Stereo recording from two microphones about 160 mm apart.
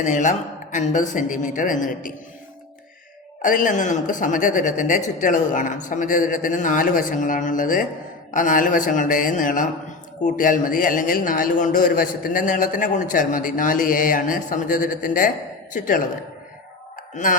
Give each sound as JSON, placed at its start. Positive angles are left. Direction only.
{"t": 0.0, "sound": "speech", "side_deg": 50}
{"t": 3.4, "sound": "a man's voice", "side_deg": 55}
{"t": 17.2, "sound": "speech", "side_deg": 50}